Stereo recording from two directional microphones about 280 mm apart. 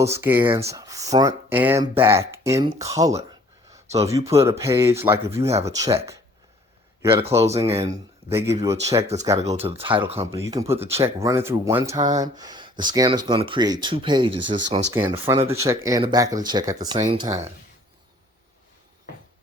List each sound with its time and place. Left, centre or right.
0.2 s speech: centre
3.7 s a sound: centre
4.3 s speech: centre
7.8 s speech: centre